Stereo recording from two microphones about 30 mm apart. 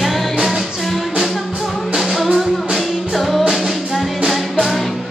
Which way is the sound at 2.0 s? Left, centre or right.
Centre.